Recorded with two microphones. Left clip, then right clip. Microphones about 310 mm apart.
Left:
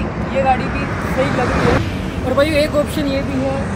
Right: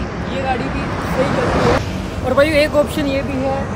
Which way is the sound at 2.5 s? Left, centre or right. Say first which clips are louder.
Right 2 dB; centre.